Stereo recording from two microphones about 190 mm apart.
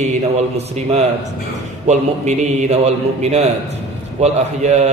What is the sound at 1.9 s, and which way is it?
A man's voice, 35° right (ahead or behind).